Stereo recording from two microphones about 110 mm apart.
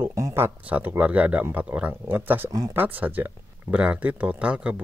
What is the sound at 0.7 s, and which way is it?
Speech, 15° right (ahead or behind).